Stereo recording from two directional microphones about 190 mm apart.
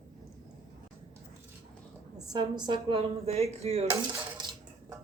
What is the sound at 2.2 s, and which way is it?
A woman's voice, 20° right (ahead or behind).